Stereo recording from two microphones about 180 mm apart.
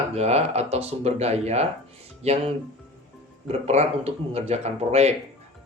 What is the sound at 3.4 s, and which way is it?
Speech, 35° right (ahead or behind).